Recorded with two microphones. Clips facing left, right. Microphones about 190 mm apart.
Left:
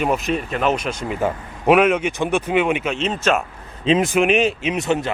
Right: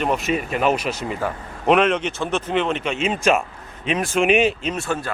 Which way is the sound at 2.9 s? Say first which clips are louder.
Right 1 dB; 10° right (ahead or behind).